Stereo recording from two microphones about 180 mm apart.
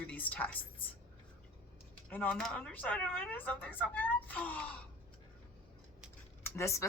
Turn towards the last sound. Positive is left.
turn(degrees=15)  # may be behind; listen again after turning